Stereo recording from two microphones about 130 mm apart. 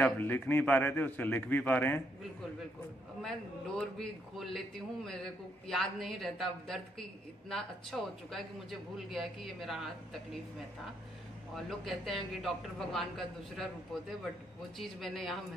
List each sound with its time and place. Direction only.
0.0 s a man's voice: 15° left (ahead or behind)
3.2 s a man's voice: 5° left (ahead or behind)
11.5 s a man's voice: centre (ahead or behind)
14.8 s a man's voice: centre (ahead or behind)